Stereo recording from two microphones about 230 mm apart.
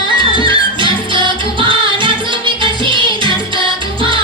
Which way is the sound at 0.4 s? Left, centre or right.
Right.